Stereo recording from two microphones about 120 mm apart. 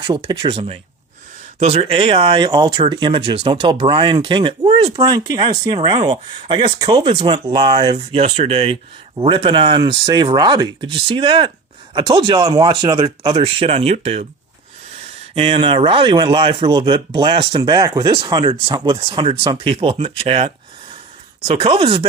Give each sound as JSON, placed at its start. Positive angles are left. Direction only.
{"t": 0.0, "sound": "speech", "side_deg": -40}
{"t": 1.5, "sound": "speech", "side_deg": -60}
{"t": 6.7, "sound": "speech", "side_deg": -30}
{"t": 7.0, "sound": "speech", "side_deg": -50}
{"t": 7.9, "sound": "speech", "side_deg": -60}
{"t": 15.4, "sound": "speech", "side_deg": -50}
{"t": 17.8, "sound": "speech", "side_deg": -30}